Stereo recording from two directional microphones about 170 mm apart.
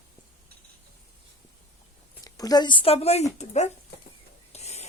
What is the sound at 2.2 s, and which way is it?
A woman's voice, 20° left (ahead or behind).